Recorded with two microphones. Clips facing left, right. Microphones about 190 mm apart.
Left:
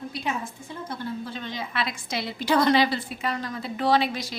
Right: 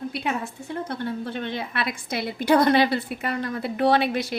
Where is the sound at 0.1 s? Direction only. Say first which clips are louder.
Right 3 dB; 65° right (ahead or behind).